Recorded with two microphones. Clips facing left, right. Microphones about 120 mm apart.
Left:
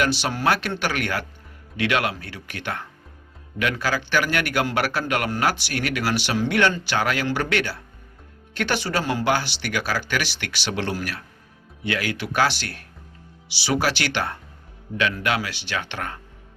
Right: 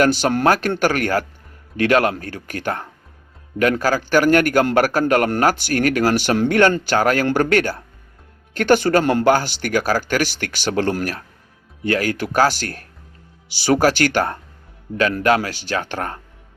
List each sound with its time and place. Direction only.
0.0 s a man's voice: 45° right (ahead or behind)